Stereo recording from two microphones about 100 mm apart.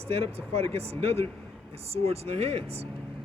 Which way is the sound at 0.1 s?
85° right.